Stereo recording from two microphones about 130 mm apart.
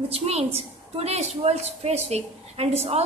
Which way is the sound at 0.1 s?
55° right (ahead or behind).